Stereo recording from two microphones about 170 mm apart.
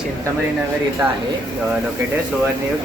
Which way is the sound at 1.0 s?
10° right (ahead or behind).